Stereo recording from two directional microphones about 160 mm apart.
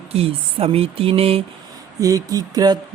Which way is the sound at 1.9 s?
20° right (ahead or behind).